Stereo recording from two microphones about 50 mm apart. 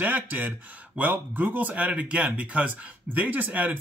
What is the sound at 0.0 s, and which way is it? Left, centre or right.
Speech, right.